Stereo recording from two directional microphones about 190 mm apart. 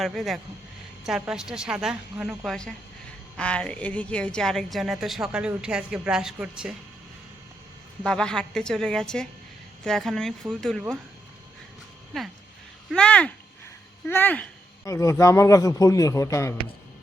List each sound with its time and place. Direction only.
0.0 s a woman's voice: centre (ahead or behind)
8.0 s a woman's voice: 5° left (ahead or behind)
12.1 s a woman's voice: centre (ahead or behind)